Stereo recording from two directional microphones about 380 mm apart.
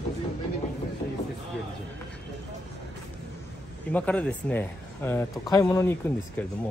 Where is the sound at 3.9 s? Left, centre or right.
Centre.